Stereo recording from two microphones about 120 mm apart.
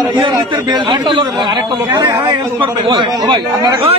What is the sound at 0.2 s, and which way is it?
A man's voice, 40° right (ahead or behind).